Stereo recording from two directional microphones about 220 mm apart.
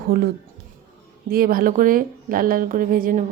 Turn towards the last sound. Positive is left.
turn(degrees=-40)  # may be behind; listen again after turning